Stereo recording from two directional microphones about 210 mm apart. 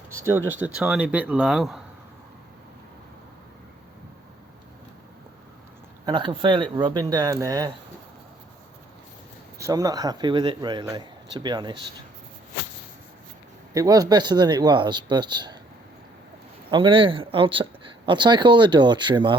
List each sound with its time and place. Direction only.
0.1 s a man's voice: 10° right (ahead or behind)
6.1 s speech: 20° right (ahead or behind)
9.6 s speech: 15° right (ahead or behind)
13.7 s speech: 15° right (ahead or behind)
16.7 s speech: 25° right (ahead or behind)